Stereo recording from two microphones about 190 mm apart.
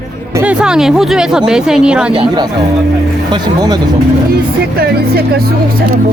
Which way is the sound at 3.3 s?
20° right (ahead or behind).